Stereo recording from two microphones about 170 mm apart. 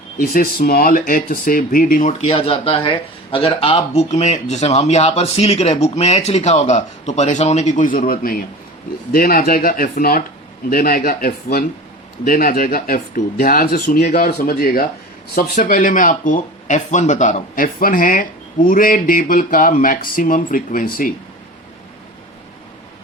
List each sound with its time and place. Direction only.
0.2 s speech: 55° left (ahead or behind)